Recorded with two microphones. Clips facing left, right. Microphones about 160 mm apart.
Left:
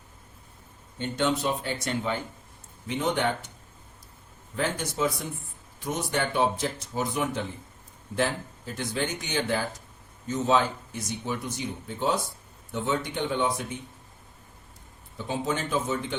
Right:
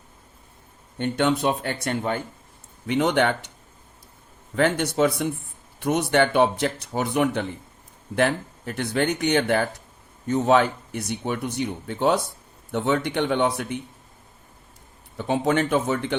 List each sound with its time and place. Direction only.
0.9 s speech: 60° right (ahead or behind)
2.8 s speech: 70° right (ahead or behind)
4.5 s speech: 70° right (ahead or behind)
15.2 s speech: 65° right (ahead or behind)